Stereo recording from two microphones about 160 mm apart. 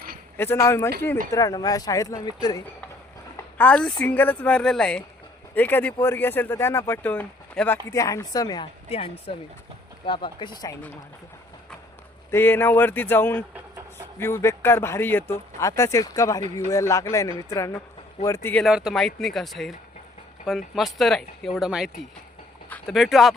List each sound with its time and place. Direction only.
0.3 s speech: 15° left (ahead or behind)
3.3 s speech: 10° left (ahead or behind); by 8.7 s 25° left (ahead or behind)
8.9 s speech: 35° left (ahead or behind)
12.3 s speech: 15° left (ahead or behind)
18.6 s speech: 5° right (ahead or behind)